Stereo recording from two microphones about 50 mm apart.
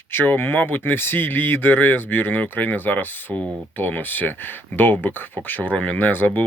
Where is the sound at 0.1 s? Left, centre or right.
Left.